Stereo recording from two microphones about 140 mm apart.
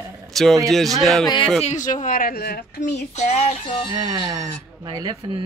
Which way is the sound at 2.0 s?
85° left.